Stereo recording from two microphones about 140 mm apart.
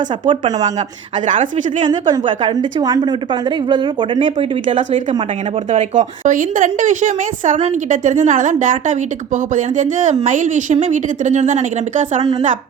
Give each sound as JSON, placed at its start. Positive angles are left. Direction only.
{"t": 1.8, "sound": "a woman's voice", "side_deg": -30}
{"t": 5.9, "sound": "a woman's voice", "side_deg": -65}